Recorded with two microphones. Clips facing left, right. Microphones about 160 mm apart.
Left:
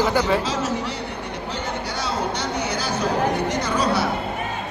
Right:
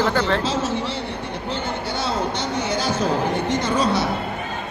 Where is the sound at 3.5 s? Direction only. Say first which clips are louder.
Right 2 dB; 25° right (ahead or behind).